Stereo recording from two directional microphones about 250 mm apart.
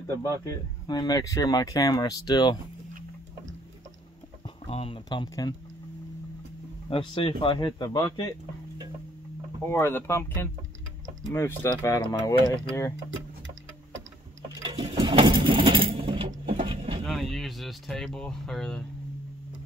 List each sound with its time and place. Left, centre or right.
0.1 s speech: centre
4.6 s speech: left
6.9 s speech: centre
9.7 s speech: centre
14.6 s sewing machine: centre
16.5 s mechanisms: right
17.0 s speech: centre